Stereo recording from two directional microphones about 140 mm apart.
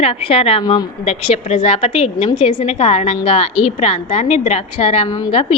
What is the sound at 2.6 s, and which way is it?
A woman's voice, 50° left (ahead or behind).